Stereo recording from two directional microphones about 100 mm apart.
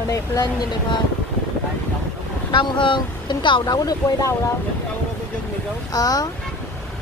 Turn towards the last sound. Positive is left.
turn(degrees=40)  # may be behind; listen again after turning